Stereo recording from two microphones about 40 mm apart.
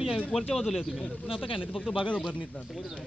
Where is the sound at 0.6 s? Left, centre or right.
Centre.